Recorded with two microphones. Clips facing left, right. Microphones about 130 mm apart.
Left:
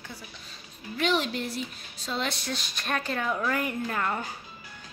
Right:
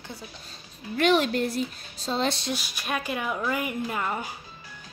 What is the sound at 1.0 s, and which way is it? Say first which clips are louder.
Speech: right 5 dB; 55° right (ahead or behind).